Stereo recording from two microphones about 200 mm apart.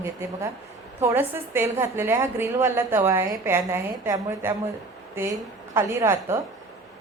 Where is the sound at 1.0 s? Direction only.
15° right (ahead or behind).